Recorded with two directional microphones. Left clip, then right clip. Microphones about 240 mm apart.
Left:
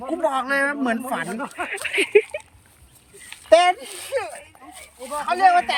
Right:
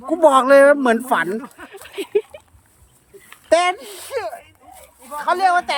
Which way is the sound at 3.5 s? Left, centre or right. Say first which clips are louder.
Left 1 dB; centre.